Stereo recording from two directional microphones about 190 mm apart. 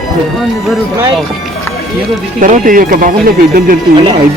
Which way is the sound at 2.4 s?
45° right (ahead or behind).